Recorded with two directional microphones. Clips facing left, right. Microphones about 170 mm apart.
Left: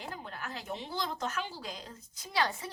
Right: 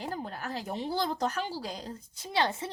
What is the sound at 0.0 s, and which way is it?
A woman's voice, 35° right (ahead or behind).